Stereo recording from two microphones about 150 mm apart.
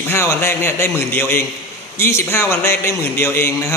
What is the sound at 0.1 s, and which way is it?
A man's voice, 15° left (ahead or behind).